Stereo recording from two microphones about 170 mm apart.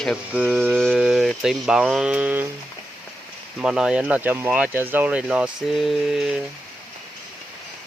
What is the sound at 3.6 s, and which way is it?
Speech, 5° right (ahead or behind).